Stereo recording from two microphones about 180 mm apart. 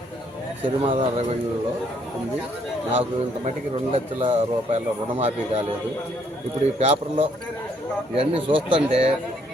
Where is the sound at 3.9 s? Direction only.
30° right (ahead or behind).